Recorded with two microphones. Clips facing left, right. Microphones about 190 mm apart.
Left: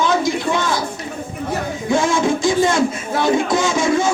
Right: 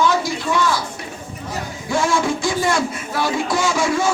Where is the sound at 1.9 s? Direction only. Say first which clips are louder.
Left 2 dB; 20° left (ahead or behind).